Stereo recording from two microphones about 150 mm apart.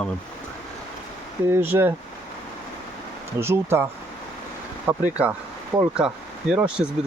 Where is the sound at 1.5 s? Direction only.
15° right (ahead or behind).